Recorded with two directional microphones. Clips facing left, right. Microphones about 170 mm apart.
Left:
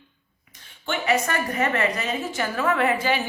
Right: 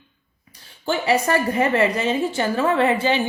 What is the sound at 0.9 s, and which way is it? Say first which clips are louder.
A woman's voice: right 4 dB; 30° right (ahead or behind).